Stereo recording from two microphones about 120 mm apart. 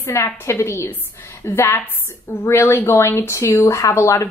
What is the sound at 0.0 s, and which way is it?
A woman's voice, 20° left (ahead or behind).